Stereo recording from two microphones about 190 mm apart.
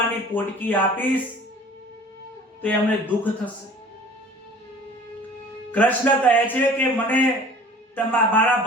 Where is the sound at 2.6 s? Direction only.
10° left (ahead or behind).